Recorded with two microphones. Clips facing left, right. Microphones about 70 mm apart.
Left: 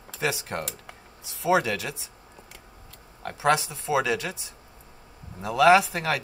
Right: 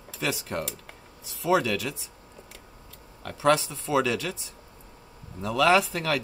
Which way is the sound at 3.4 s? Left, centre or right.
Centre.